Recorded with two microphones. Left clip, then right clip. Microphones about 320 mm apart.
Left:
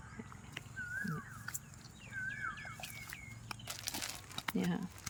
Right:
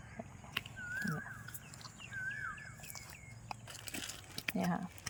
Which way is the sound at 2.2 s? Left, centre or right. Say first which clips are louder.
Left 1 dB; centre.